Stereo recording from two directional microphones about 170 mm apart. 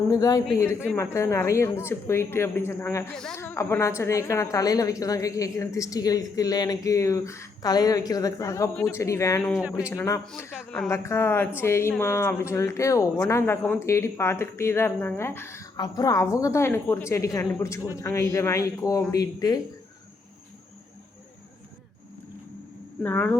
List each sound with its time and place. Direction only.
0.1 s a woman's voice: 20° left (ahead or behind)
3.3 s a woman's voice: 15° left (ahead or behind)
9.4 s speech: 5° right (ahead or behind)
9.9 s a woman's voice: 15° left (ahead or behind)
23.0 s speech: 10° left (ahead or behind)